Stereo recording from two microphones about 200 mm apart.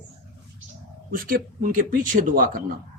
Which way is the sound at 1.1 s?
45° right (ahead or behind).